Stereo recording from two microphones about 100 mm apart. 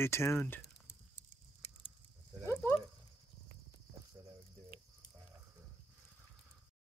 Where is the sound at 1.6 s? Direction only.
80° left.